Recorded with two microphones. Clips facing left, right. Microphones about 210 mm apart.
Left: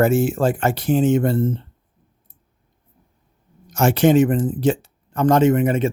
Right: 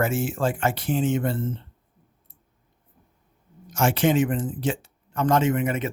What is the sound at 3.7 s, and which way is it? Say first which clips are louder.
Speech: left 6 dB; 40° left (ahead or behind).